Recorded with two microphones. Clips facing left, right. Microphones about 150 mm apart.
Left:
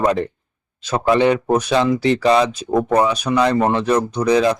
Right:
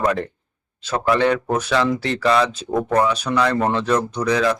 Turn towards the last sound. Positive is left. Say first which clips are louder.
# left 4 dB
turn(degrees=20)  # may be behind; listen again after turning